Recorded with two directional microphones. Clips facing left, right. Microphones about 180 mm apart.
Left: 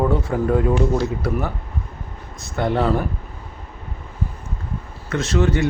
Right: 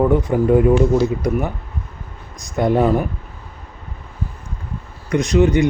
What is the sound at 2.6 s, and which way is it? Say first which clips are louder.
Speech: right 4 dB; 15° right (ahead or behind).